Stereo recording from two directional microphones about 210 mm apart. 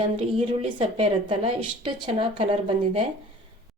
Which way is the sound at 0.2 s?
25° right (ahead or behind).